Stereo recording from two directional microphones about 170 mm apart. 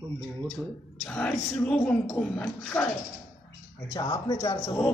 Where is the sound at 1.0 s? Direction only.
5° left (ahead or behind).